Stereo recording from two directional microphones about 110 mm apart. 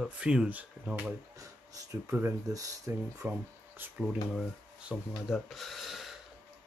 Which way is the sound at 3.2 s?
20° right (ahead or behind).